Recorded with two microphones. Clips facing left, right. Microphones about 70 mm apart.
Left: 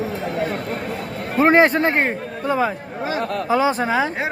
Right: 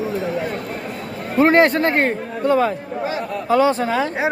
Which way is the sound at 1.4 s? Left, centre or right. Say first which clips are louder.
Even; centre.